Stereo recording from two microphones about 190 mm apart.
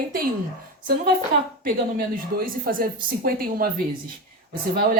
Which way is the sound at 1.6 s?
50° right (ahead or behind).